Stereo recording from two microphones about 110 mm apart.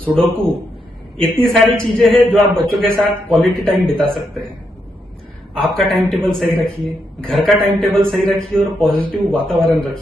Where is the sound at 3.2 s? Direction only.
5° left (ahead or behind).